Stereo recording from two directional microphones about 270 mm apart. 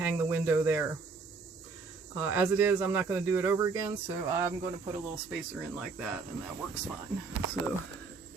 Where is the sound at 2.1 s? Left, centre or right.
Centre.